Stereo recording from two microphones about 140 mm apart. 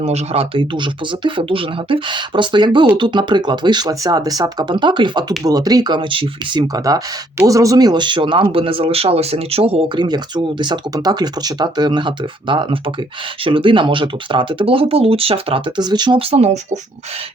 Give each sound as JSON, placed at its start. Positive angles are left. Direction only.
{"t": 0.0, "sound": "speech", "side_deg": -50}